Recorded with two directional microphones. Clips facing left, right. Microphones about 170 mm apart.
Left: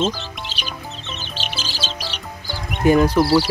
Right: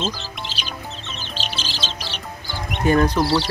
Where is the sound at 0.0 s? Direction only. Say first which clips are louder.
Left 5 dB; centre (ahead or behind).